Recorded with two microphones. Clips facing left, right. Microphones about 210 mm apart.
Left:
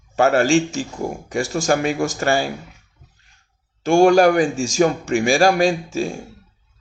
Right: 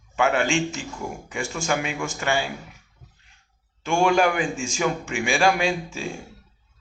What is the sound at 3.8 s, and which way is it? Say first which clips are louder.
Speech: left 8 dB; 40° left (ahead or behind).